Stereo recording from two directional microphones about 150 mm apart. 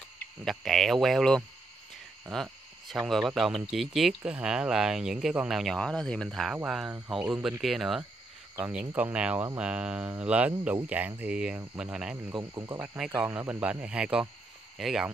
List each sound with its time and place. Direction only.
0.5 s speech: centre (ahead or behind)
8.5 s speech: 10° right (ahead or behind)
12.4 s speech: 20° right (ahead or behind)
12.9 s speech: 10° right (ahead or behind)